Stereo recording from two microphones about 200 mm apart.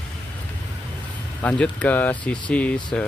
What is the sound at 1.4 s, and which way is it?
Speech, 10° left (ahead or behind).